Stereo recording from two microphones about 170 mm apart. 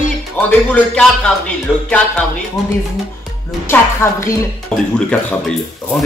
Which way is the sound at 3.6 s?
15° left (ahead or behind).